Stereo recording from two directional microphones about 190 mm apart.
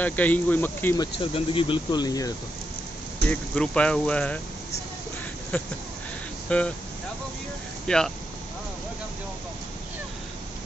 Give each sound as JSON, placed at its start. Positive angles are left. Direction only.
{"t": 0.0, "sound": "speech", "side_deg": 10}
{"t": 3.3, "sound": "speech", "side_deg": 5}
{"t": 5.5, "sound": "a sound", "side_deg": 10}
{"t": 6.5, "sound": "speech", "side_deg": 5}
{"t": 7.8, "sound": "speech", "side_deg": 5}